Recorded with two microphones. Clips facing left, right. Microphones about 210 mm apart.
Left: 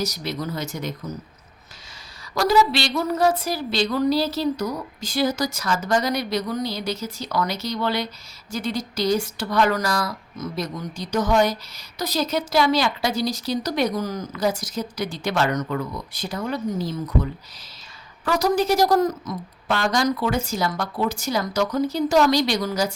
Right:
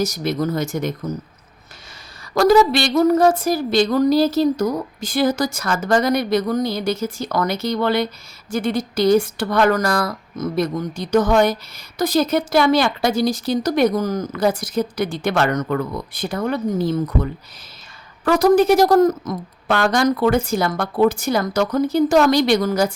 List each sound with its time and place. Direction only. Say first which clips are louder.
0.0 s a woman's voice: right 7 dB; 50° right (ahead or behind)
2.3 s a woman's voice: right 6 dB; 50° right (ahead or behind)
18.3 s a woman's voice: right 7 dB; 55° right (ahead or behind)